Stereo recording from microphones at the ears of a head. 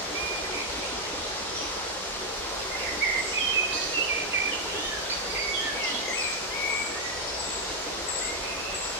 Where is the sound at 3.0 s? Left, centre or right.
Right.